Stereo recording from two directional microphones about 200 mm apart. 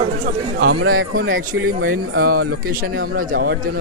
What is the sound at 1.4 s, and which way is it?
Speech, 45° right (ahead or behind).